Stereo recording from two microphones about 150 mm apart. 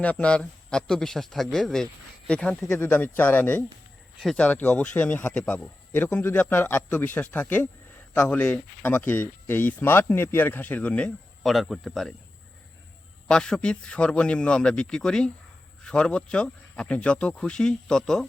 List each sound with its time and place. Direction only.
0.0 s a man's voice: 10° left (ahead or behind)
4.2 s a man's voice: centre (ahead or behind)
4.4 s speech: 10° left (ahead or behind)
13.2 s a man's voice: 5° left (ahead or behind)